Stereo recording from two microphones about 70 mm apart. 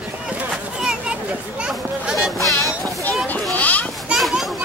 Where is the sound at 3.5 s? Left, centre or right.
Left.